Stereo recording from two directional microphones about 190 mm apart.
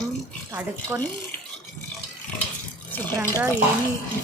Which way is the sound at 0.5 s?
10° right (ahead or behind).